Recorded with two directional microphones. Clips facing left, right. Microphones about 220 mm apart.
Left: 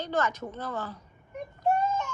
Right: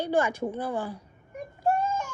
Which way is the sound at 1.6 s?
10° right (ahead or behind).